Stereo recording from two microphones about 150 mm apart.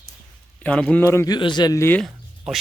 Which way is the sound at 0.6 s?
10° left (ahead or behind).